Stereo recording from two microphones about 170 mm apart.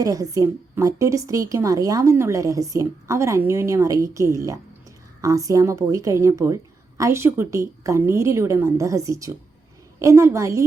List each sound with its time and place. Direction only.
0.0 s a woman's voice: 20° right (ahead or behind)